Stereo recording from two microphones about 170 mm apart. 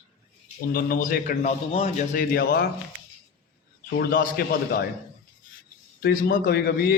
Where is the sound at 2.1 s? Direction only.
60° left (ahead or behind).